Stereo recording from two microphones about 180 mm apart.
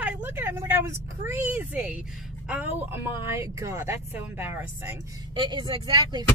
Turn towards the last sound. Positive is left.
turn(degrees=-25)  # may be behind; listen again after turning